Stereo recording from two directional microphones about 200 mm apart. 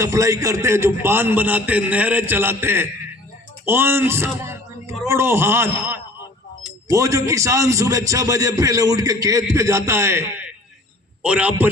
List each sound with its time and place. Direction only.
0.0 s a man's voice: 15° right (ahead or behind)